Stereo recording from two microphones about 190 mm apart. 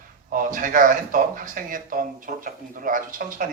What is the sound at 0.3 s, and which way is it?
Speech, 45° right (ahead or behind).